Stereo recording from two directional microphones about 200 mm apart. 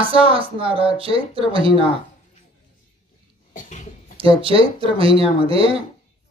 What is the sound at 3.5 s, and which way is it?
Cough, 40° left (ahead or behind).